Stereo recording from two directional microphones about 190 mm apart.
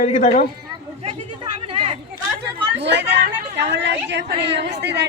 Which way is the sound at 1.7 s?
30° right (ahead or behind).